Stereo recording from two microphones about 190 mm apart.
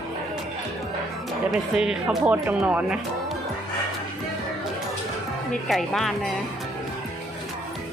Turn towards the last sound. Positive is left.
turn(degrees=0)  # may be behind; listen again after turning